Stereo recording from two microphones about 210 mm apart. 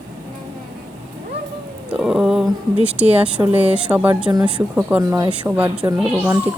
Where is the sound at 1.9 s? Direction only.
Centre (ahead or behind).